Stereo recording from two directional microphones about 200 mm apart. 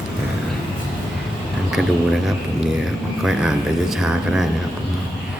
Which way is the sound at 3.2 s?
Centre (ahead or behind).